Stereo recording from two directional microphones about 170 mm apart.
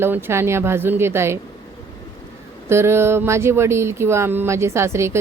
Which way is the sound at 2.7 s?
15° right (ahead or behind).